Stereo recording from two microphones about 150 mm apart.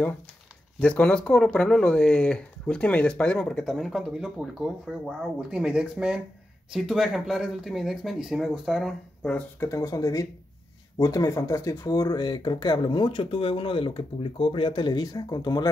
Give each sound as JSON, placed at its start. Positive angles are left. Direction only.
{"t": 0.7, "sound": "speech", "side_deg": 10}
{"t": 9.6, "sound": "speech", "side_deg": 20}